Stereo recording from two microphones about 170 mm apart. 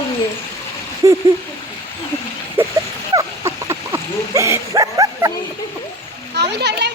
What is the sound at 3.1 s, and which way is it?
Dog, 20° right (ahead or behind).